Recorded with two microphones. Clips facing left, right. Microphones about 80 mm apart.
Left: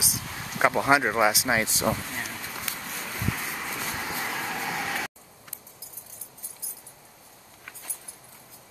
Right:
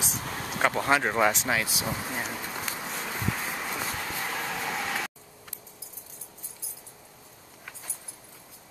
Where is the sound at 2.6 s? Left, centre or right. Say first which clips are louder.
Right 2 dB; centre.